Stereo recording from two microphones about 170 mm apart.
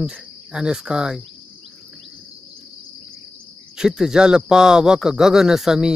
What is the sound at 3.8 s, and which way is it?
Speech, 5° right (ahead or behind).